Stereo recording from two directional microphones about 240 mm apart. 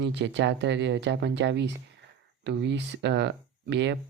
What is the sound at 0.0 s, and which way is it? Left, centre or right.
Speech, right.